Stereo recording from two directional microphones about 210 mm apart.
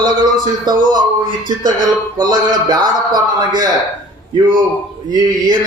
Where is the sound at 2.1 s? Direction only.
20° right (ahead or behind).